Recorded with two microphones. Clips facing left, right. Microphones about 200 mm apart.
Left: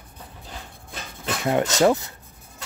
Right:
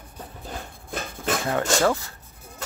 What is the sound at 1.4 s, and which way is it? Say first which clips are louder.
Speech: left 4 dB; 20° left (ahead or behind).